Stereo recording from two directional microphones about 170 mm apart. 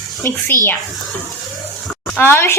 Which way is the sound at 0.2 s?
15° left (ahead or behind).